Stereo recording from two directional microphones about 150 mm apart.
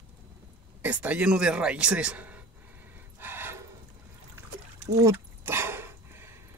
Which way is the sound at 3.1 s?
15° right (ahead or behind).